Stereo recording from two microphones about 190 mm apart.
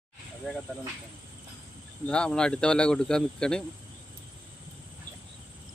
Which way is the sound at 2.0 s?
5° left (ahead or behind).